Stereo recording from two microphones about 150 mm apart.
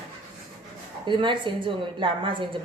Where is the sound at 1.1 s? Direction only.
30° right (ahead or behind).